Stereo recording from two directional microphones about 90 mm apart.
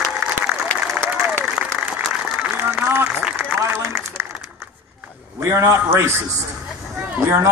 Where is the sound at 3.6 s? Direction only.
30° right (ahead or behind).